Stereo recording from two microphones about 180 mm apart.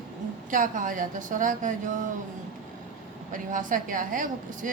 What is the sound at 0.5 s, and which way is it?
A woman's voice, 45° right (ahead or behind).